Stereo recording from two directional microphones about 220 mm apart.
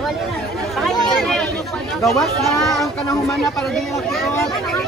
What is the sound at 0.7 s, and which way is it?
Chatter, centre (ahead or behind).